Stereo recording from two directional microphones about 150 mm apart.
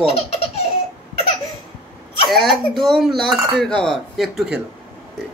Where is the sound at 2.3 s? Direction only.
Centre (ahead or behind).